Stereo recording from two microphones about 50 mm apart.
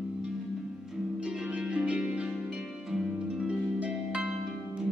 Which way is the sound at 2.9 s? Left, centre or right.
Centre.